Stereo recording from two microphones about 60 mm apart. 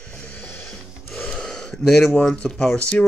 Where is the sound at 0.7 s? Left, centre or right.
Centre.